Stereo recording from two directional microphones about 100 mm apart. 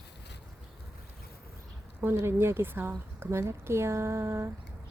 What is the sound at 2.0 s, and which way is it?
A woman's voice, 25° right (ahead or behind).